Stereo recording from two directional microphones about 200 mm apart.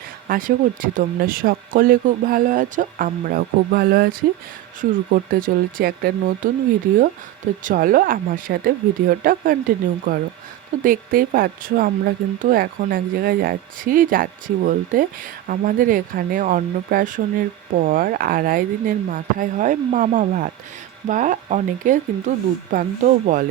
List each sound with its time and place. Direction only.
0.3 s speech: 40° right (ahead or behind)
7.6 s speech: 45° right (ahead or behind)